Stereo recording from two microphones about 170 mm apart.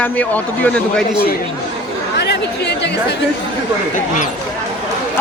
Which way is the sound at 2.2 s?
90° left.